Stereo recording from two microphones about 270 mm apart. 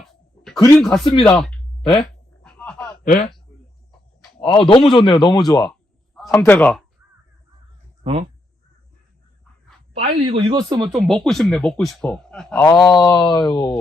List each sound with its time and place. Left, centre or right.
0.0 s a sound: centre
0.6 s speech: centre
2.4 s a sound: centre
3.0 s speech: left
4.4 s speech: centre
6.1 s a man's voice: centre
9.9 s speech: right
10.9 s speech: centre
12.6 s speech: centre